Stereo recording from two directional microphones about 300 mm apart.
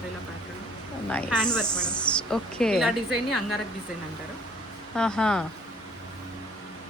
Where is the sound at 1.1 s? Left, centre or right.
Centre.